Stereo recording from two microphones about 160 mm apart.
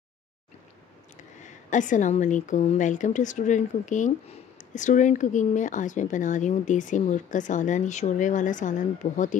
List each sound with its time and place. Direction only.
1.1 s speech: 50° left (ahead or behind)